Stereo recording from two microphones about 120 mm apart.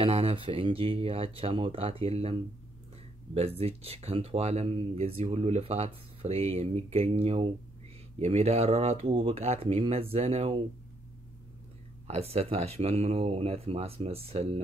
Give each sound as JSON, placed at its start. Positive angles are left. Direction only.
{"t": 0.0, "sound": "speech", "side_deg": -55}
{"t": 12.1, "sound": "speech", "side_deg": -60}